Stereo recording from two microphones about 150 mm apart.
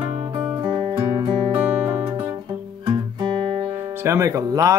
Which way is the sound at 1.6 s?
50° right (ahead or behind).